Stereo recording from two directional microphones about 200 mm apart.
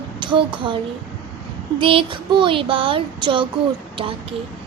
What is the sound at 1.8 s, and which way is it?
Child singing, 25° right (ahead or behind).